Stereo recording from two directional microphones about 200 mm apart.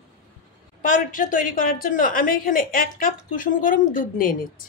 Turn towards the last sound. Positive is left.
turn(degrees=45)  # may be behind; listen again after turning